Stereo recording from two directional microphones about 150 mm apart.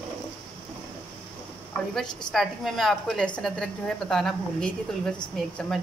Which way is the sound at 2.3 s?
Centre (ahead or behind).